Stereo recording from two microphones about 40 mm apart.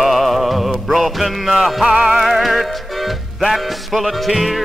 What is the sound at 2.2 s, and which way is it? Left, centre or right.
Music, centre.